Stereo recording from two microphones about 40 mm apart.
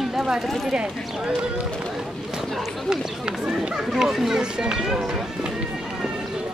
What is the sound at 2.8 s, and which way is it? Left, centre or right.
Speech, centre.